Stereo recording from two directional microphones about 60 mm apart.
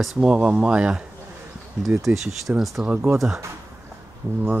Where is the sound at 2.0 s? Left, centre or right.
Centre.